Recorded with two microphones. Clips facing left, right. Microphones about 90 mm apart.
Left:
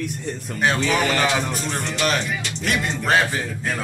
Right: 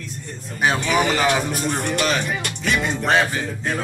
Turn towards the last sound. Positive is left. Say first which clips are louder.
# right 1 dB
turn(degrees=0)  # may be behind; listen again after turning